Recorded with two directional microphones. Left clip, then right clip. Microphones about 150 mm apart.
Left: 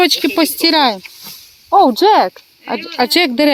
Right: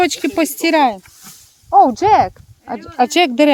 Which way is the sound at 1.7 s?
20° left (ahead or behind).